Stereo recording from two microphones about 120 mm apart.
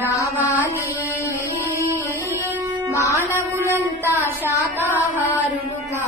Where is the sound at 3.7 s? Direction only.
20° right (ahead or behind).